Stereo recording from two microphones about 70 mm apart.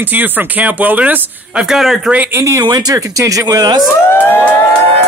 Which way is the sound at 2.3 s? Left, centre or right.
Right.